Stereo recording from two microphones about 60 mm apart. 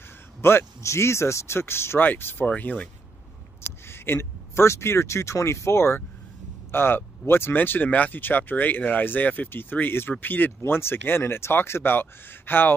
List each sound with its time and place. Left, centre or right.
0.4 s speech: left
2.0 s speech: left
2.4 s speech: left
3.8 s speech: left
7.5 s speech: left